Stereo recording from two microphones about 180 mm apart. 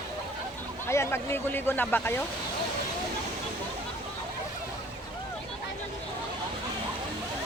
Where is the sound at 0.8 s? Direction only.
15° left (ahead or behind).